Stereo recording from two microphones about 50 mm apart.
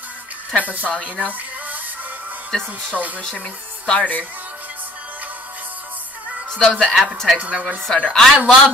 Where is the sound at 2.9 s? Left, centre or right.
Right.